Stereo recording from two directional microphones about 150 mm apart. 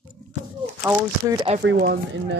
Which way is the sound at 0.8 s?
20° right (ahead or behind).